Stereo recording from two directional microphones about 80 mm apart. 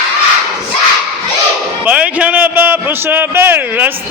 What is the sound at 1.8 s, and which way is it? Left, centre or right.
A man's voice, centre.